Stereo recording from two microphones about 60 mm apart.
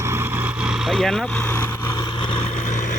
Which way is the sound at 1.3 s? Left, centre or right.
Left.